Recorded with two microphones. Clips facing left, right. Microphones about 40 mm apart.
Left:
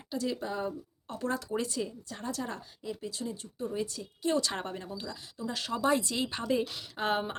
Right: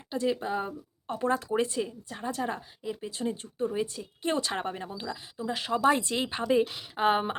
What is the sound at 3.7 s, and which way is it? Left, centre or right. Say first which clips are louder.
Speech: right 3 dB; right.